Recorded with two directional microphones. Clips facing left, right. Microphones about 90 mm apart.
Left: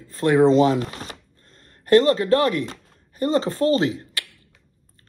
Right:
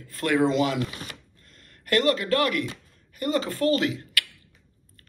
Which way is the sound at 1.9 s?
30° left (ahead or behind).